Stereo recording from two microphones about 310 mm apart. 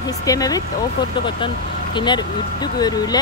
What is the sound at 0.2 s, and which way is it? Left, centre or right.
Speech, centre.